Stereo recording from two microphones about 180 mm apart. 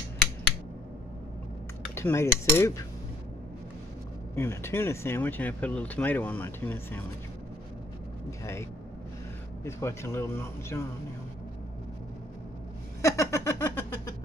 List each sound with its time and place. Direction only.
2.0 s speech: 15° left (ahead or behind)
4.4 s speech: 15° left (ahead or behind)
9.7 s speech: 15° left (ahead or behind)
13.0 s a sound: 15° left (ahead or behind)